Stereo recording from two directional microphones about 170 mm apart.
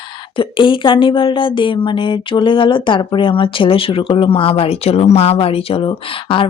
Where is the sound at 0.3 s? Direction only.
30° left (ahead or behind).